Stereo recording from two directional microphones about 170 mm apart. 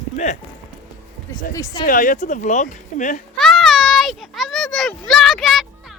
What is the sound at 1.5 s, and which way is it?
Speech, 20° left (ahead or behind).